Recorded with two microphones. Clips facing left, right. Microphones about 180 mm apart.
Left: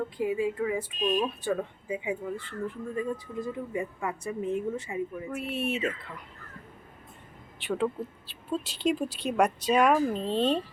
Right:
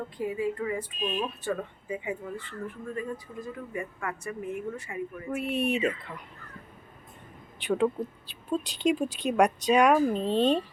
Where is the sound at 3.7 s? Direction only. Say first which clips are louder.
Even; 20° left (ahead or behind).